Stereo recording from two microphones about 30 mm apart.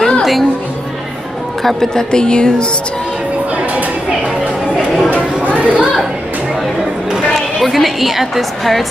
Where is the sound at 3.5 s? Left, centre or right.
Right.